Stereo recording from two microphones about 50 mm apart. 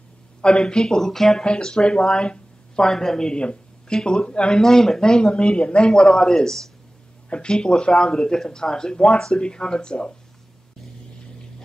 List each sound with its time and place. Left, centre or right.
0.4 s speech: centre
4.6 s speech: centre